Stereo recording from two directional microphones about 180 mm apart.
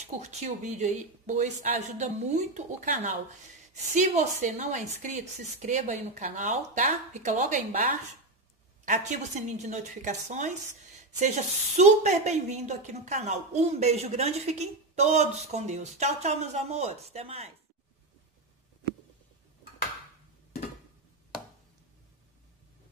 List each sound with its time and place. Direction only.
0.2 s a woman's voice: 40° right (ahead or behind)